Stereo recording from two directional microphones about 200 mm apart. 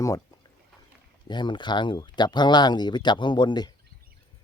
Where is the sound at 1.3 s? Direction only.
20° left (ahead or behind).